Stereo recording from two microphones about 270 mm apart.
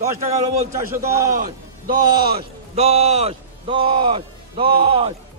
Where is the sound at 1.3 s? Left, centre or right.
Right.